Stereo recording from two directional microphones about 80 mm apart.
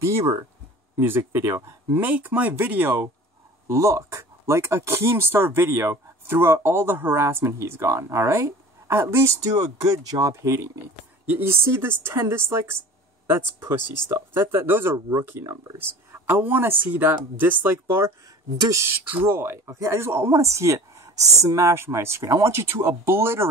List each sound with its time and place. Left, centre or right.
0.0 s speech: right
11.2 s speech: right
18.7 s speech: right